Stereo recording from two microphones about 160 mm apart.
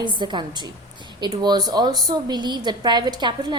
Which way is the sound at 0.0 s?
30° right (ahead or behind).